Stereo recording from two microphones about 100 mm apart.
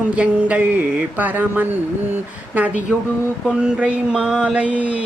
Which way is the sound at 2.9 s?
10° right (ahead or behind).